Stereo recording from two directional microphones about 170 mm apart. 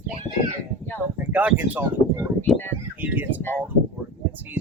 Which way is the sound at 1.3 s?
10° right (ahead or behind).